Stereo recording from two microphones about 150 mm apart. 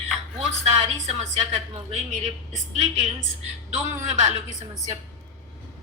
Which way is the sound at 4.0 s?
55° right (ahead or behind).